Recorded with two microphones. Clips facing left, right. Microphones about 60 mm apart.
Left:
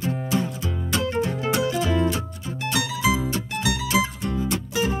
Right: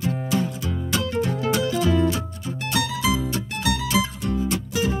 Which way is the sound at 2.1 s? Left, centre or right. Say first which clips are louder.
Right 1 dB; left.